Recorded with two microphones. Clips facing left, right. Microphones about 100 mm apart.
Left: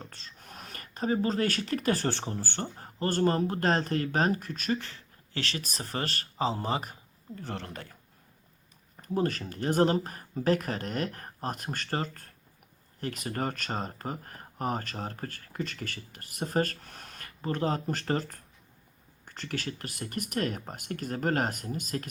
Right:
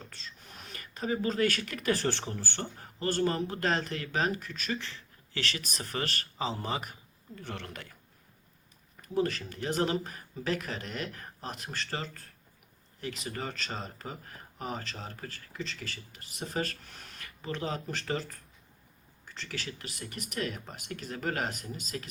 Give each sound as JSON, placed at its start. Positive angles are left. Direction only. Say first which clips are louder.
{"t": 0.0, "sound": "speech", "louder": "left 1 dB", "side_deg": 40}
{"t": 9.0, "sound": "speech", "louder": "left 1 dB", "side_deg": 40}